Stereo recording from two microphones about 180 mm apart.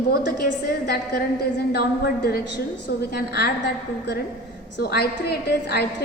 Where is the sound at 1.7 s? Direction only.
60° left (ahead or behind).